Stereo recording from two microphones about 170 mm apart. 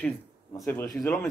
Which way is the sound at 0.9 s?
Centre (ahead or behind).